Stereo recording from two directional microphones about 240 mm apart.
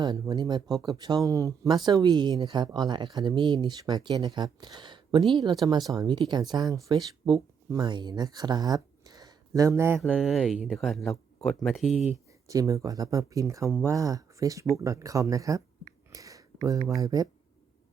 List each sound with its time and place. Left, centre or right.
0.0 s speech: centre
12.5 s speech: centre
16.1 s a sound: centre
17.0 s speech: centre